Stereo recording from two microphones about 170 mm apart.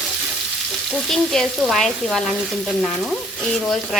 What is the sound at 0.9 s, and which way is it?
Frying, centre (ahead or behind).